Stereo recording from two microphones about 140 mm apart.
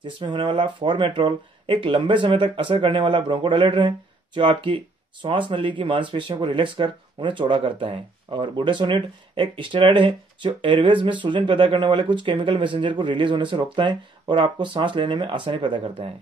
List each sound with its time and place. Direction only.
0.0 s speech: 35° right (ahead or behind)